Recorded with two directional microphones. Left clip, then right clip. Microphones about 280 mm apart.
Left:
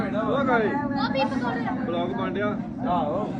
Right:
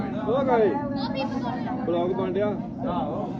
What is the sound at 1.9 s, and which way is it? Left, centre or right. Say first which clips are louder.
Speech: right 6 dB; right.